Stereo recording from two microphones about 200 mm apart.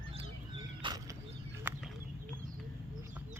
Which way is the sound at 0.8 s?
20° right (ahead or behind).